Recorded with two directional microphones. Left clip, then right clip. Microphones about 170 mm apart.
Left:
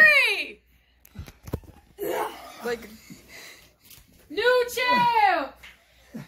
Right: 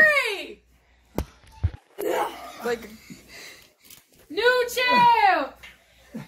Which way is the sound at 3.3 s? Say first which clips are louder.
Right 1 dB; 55° left (ahead or behind).